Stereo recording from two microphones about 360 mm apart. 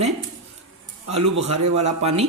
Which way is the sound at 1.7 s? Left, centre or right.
Centre.